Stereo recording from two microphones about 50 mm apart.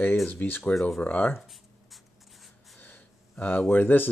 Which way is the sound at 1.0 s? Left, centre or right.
Left.